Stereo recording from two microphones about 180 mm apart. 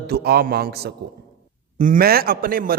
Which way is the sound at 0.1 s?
60° right (ahead or behind).